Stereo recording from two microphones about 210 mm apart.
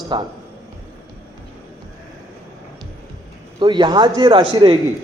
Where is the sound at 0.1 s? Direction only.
20° right (ahead or behind).